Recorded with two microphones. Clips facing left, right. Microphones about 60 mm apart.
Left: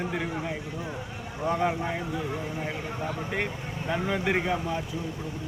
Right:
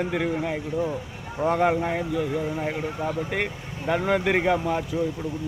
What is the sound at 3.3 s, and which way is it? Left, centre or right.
Speech, right.